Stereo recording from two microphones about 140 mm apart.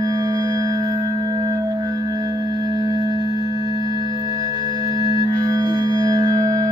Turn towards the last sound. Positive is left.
turn(degrees=-25)  # may be behind; listen again after turning